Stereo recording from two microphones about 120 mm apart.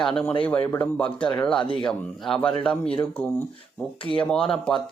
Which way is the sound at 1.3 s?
5° left (ahead or behind).